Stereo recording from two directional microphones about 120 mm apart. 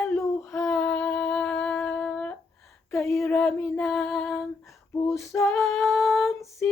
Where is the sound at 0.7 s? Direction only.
5° left (ahead or behind).